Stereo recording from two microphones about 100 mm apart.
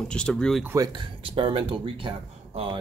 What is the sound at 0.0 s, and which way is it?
Speech, 10° left (ahead or behind).